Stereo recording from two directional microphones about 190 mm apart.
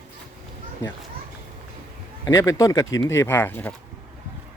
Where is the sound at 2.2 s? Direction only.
15° left (ahead or behind).